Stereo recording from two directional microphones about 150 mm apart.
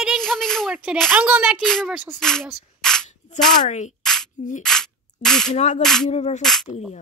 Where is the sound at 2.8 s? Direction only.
5° left (ahead or behind).